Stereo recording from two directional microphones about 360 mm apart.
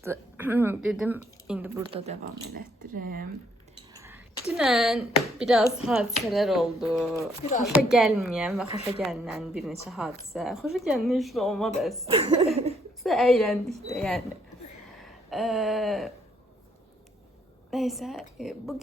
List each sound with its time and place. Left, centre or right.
0.0 s speech: centre; by 3.0 s right
3.9 s a sound: centre
5.4 s speech: centre
12.0 s speech: centre
13.0 s speech: centre
15.0 s a sound: centre
17.7 s speech: centre